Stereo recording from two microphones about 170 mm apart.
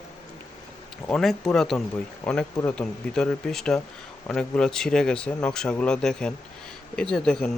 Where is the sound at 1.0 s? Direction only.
5° left (ahead or behind).